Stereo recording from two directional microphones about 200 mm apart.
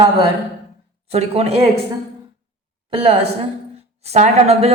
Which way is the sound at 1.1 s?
30° right (ahead or behind).